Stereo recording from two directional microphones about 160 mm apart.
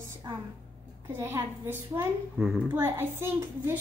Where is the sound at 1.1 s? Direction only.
15° right (ahead or behind).